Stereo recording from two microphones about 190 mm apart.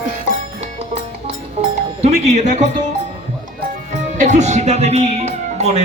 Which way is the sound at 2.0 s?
35° right (ahead or behind).